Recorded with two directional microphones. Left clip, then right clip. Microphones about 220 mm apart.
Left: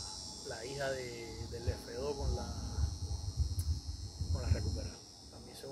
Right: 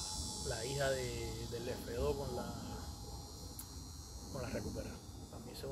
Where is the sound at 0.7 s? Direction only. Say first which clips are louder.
Right 1 dB; 5° right (ahead or behind).